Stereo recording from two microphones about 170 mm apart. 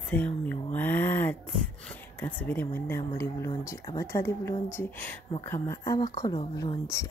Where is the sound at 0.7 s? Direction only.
10° left (ahead or behind).